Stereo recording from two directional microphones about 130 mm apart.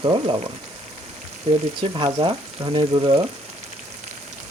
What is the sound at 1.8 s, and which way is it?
Speech, 45° right (ahead or behind).